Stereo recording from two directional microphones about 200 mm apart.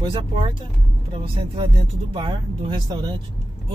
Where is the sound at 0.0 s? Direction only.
25° right (ahead or behind).